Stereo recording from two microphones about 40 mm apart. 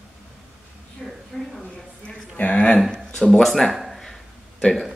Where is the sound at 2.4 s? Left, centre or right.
Left.